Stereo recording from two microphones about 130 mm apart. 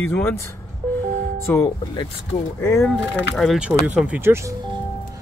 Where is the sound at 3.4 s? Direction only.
5° right (ahead or behind); by 4.6 s 20° right (ahead or behind).